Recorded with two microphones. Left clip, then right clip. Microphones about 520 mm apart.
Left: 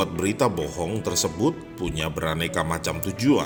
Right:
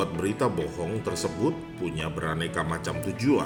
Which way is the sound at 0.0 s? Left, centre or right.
Centre.